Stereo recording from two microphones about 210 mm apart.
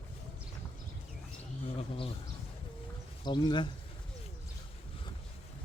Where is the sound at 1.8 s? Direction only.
25° left (ahead or behind).